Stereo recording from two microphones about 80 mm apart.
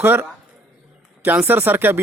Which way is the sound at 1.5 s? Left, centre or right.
Right.